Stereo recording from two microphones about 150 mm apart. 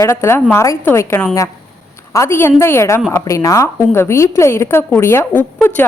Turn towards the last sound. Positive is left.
turn(degrees=10)  # may be behind; listen again after turning